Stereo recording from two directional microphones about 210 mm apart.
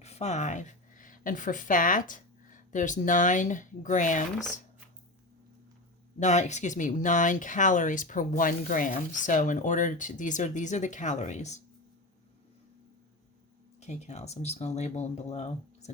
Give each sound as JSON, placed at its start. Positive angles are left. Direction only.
{"t": 0.0, "sound": "a woman's voice", "side_deg": 30}
{"t": 6.1, "sound": "speech", "side_deg": 35}
{"t": 13.7, "sound": "speech", "side_deg": 30}